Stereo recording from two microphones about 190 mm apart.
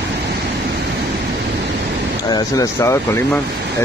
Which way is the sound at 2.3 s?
20° left (ahead or behind).